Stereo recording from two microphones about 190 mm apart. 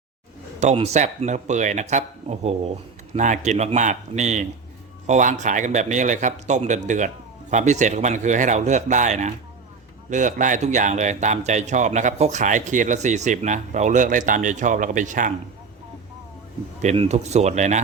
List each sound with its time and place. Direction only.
0.6 s speech: 35° right (ahead or behind)
16.8 s speech: 35° right (ahead or behind)